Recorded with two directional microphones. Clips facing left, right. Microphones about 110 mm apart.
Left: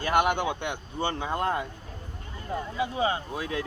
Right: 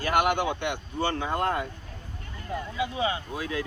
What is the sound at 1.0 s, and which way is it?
Speech, 20° left (ahead or behind).